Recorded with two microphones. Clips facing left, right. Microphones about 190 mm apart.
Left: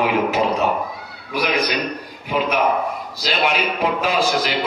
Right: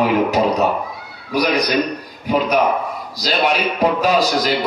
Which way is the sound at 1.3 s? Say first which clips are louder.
Right 3 dB; 40° right (ahead or behind).